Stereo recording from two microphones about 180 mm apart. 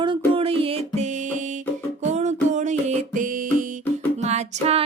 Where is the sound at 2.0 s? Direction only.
40° right (ahead or behind).